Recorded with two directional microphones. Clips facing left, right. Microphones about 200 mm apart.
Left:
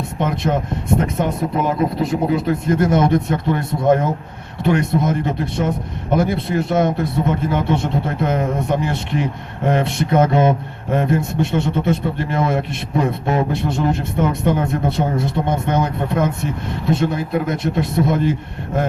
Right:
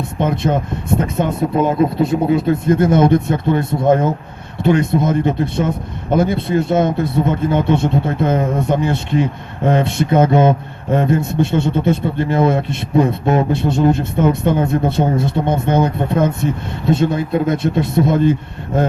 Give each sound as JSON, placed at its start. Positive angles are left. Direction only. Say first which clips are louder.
{"t": 0.2, "sound": "a man's voice", "louder": "right 3 dB", "side_deg": -25}